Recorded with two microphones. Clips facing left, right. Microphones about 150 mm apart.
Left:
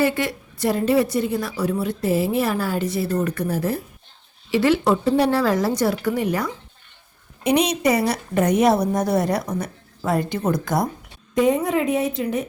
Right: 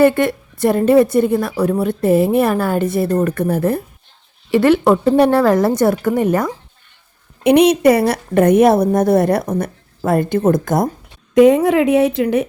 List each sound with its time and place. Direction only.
0.0 s a woman's voice: 55° right (ahead or behind)
7.4 s a woman's voice: 60° right (ahead or behind)
11.3 s speech: 80° right